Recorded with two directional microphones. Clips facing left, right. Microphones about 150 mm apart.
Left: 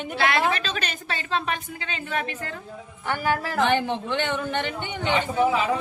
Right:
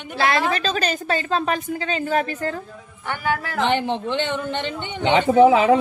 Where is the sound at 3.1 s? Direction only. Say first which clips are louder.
Even; centre (ahead or behind).